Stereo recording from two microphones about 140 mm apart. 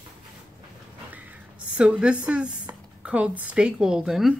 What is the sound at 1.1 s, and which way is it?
Speech, 10° right (ahead or behind).